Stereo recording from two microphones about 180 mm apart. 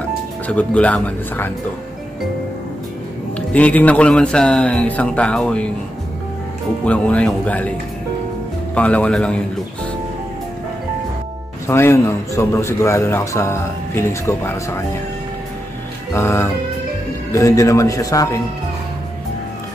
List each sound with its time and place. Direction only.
0.5 s a man's voice: 5° left (ahead or behind)
3.3 s a man's voice: 10° left (ahead or behind)
6.8 s a man's voice: 5° left (ahead or behind)
8.7 s a man's voice: 5° left (ahead or behind)
11.6 s a man's voice: 15° left (ahead or behind)
16.1 s a man's voice: 15° left (ahead or behind)